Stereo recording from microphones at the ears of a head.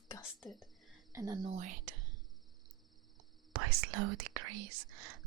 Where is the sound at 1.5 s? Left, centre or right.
Right.